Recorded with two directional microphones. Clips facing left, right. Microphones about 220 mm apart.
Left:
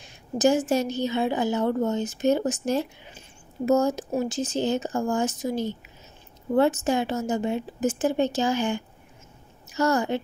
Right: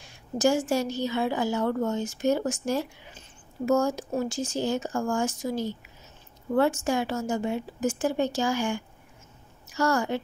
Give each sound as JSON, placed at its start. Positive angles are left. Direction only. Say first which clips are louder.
{"t": 0.0, "sound": "a woman's voice", "louder": "left 2 dB", "side_deg": 20}